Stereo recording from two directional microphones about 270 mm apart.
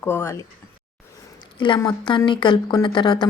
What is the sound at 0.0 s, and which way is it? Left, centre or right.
Speech, centre.